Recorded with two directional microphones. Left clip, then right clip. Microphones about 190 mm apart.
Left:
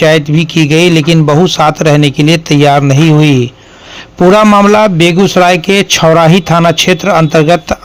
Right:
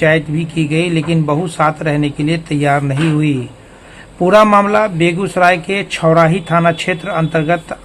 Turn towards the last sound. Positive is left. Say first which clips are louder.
# left 8 dB
turn(degrees=40)  # may be behind; listen again after turning